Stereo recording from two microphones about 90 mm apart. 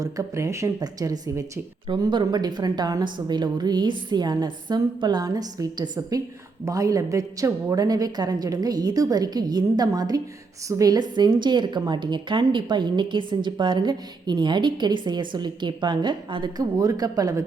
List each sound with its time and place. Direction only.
0.0 s speech: 35° right (ahead or behind)
1.9 s a woman's voice: 55° right (ahead or behind)
16.7 s speech: 45° right (ahead or behind)